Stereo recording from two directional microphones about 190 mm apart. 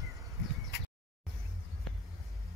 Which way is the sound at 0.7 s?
60° left (ahead or behind).